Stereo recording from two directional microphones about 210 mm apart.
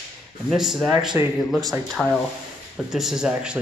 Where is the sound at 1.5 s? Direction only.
Centre (ahead or behind).